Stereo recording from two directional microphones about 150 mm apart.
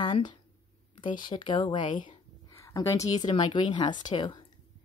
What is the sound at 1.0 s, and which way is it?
Speech, 30° left (ahead or behind).